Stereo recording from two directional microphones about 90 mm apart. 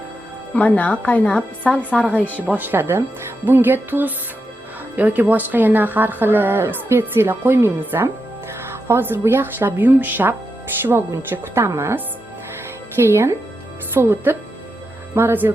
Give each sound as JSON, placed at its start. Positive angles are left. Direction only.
{"t": 0.5, "sound": "a woman's voice", "side_deg": 15}
{"t": 2.5, "sound": "speech", "side_deg": -20}